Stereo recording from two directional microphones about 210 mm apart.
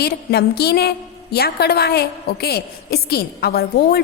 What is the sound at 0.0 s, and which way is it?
A woman's voice, 50° left (ahead or behind).